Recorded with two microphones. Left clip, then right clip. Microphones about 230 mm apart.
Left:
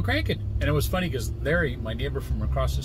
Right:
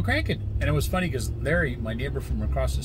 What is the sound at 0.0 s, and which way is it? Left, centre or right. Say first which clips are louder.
Speech: even; centre.